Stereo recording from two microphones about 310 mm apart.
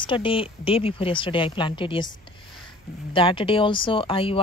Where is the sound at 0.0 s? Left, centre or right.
Centre.